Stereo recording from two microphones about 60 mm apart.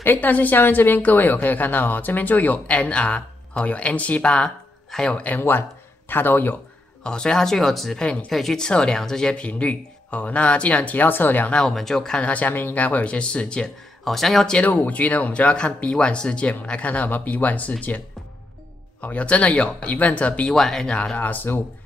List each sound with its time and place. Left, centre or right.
0.0 s a woman's voice: left; by 5.2 s centre
5.4 s speech: left
7.0 s speech: centre
8.0 s speech: centre
8.3 s a woman's voice: centre; by 11.5 s left
11.5 s speech: centre
12.3 s a woman's voice: left
14.0 s speech: centre
14.8 s a woman's voice: left
20.4 s speech: centre
20.9 s speech: centre
21.3 s speech: left